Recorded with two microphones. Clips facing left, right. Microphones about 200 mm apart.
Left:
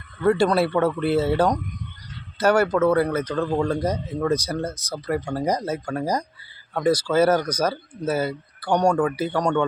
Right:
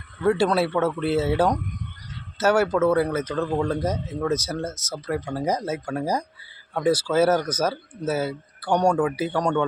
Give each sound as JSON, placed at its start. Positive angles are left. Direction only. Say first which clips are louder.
{"t": 0.2, "sound": "speech", "louder": "left 2 dB", "side_deg": -5}